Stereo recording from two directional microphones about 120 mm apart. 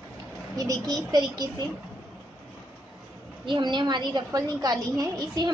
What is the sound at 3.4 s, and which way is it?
A woman's voice, 40° right (ahead or behind).